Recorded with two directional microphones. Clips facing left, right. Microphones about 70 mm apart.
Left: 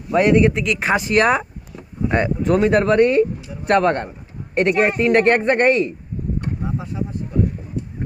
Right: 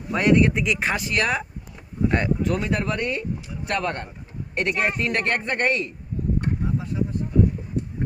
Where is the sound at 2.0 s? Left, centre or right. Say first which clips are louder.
Left 3 dB; left.